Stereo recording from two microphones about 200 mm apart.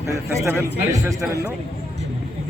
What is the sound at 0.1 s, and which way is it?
A man's voice, 15° right (ahead or behind).